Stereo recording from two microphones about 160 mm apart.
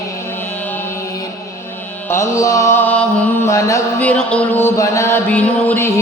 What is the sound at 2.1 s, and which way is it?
Music, 20° left (ahead or behind).